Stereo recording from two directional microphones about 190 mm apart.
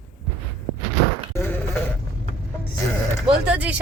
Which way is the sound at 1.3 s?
10° left (ahead or behind).